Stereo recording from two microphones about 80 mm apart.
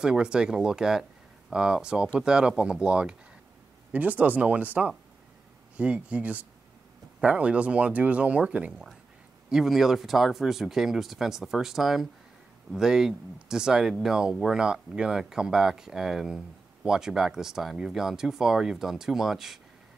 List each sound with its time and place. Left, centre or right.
0.0 s speech: centre
9.5 s speech: centre